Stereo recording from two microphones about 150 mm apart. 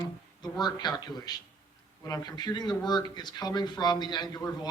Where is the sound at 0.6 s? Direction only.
30° left (ahead or behind).